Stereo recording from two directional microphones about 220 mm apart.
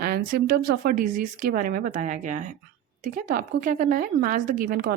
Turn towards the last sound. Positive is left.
turn(degrees=-40)  # may be behind; listen again after turning